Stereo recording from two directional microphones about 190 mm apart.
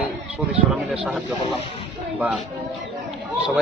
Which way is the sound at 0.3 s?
Centre (ahead or behind).